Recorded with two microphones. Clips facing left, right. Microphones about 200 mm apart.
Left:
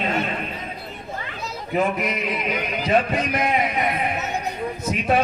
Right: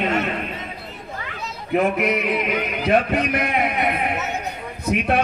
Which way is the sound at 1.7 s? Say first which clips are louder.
Right 3 dB; 60° right (ahead or behind).